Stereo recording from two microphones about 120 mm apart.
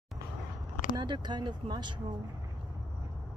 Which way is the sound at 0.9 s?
40° right (ahead or behind).